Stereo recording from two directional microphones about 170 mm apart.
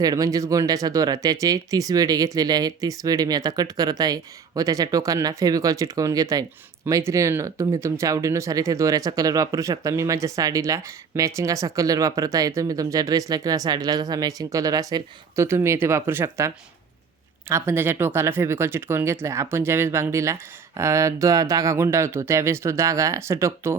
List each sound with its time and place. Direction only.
0.0 s speech: 20° right (ahead or behind)
17.5 s speech: 15° right (ahead or behind)